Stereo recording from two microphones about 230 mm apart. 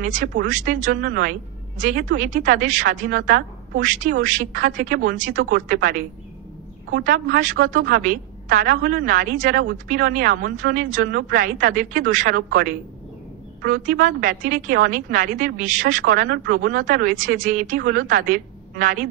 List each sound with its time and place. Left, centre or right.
0.0 s a woman's voice: right
7.1 s a woman's voice: right